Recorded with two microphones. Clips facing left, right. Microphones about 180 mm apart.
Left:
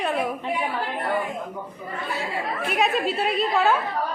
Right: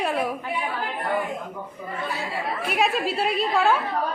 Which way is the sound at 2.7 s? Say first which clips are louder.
Left 1 dB; centre (ahead or behind).